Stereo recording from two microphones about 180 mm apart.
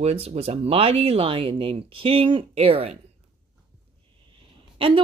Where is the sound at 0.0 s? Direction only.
35° right (ahead or behind).